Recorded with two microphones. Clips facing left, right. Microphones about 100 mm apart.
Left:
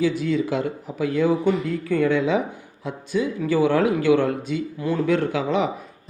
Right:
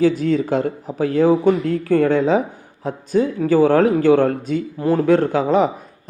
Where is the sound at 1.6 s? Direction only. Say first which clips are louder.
Right 6 dB; 75° right (ahead or behind).